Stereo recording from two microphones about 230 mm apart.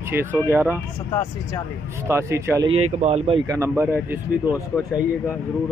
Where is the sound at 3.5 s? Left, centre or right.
Centre.